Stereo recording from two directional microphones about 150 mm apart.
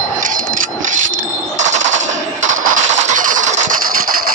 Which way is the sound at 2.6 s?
60° right (ahead or behind).